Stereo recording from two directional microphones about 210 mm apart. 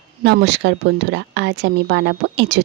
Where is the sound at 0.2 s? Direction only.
50° right (ahead or behind).